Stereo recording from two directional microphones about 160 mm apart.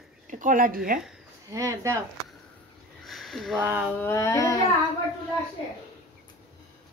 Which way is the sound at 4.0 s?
20° left (ahead or behind).